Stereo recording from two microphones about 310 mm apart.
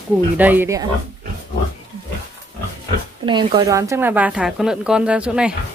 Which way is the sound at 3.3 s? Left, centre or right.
Centre.